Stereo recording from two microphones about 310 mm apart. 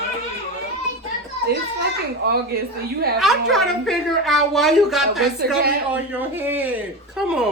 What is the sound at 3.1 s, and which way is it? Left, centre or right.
Speech, centre.